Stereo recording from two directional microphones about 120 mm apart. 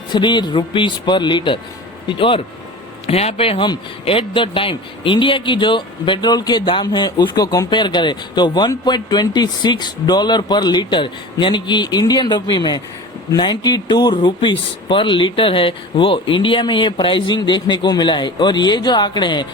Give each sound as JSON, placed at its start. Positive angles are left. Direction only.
{"t": 0.1, "sound": "speech", "side_deg": 40}
{"t": 3.1, "sound": "speech", "side_deg": 55}